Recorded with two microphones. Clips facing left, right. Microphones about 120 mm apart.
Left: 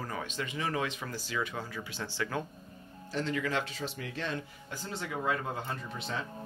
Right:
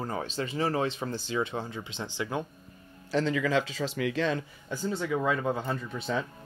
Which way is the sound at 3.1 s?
90° right.